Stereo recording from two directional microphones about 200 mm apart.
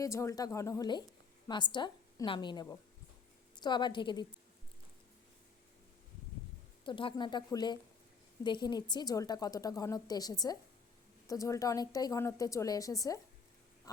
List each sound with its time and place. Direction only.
0.0 s a woman's voice: 15° left (ahead or behind)
6.8 s a woman's voice: 25° left (ahead or behind)
13.9 s quack: 20° left (ahead or behind)